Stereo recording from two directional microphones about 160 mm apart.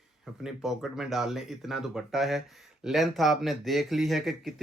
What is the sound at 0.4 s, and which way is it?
Speech, centre (ahead or behind).